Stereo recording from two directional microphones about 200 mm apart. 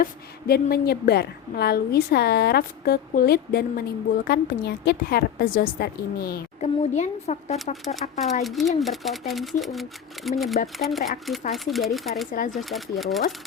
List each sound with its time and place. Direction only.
0.0 s a woman's voice: 50° left (ahead or behind)
6.6 s speech: 35° left (ahead or behind)
8.4 s speech: centre (ahead or behind)